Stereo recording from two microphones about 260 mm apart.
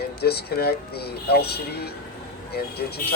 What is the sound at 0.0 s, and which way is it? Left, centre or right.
Speech, left.